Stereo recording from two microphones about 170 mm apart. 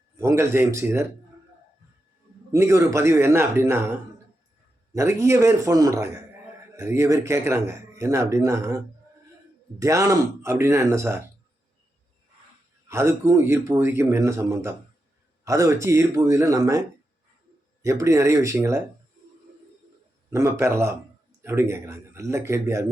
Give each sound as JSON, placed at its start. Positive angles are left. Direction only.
{"t": 0.2, "sound": "speech", "side_deg": -15}
{"t": 2.5, "sound": "speech", "side_deg": -15}
{"t": 4.9, "sound": "speech", "side_deg": -15}
{"t": 9.8, "sound": "speech", "side_deg": -15}
{"t": 12.9, "sound": "speech", "side_deg": -15}
{"t": 18.0, "sound": "speech", "side_deg": -15}
{"t": 20.3, "sound": "speech", "side_deg": -15}